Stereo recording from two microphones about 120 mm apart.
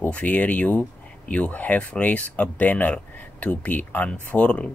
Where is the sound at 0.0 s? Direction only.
10° left (ahead or behind).